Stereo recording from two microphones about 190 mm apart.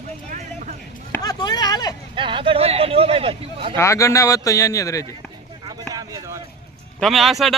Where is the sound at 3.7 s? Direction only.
15° left (ahead or behind).